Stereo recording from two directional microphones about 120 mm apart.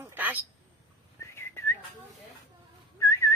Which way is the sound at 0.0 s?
15° right (ahead or behind).